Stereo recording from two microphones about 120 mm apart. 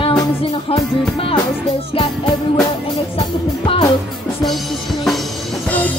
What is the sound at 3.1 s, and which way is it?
Music, 50° left (ahead or behind).